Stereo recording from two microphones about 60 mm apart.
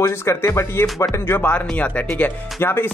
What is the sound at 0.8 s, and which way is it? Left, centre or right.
Speech, left.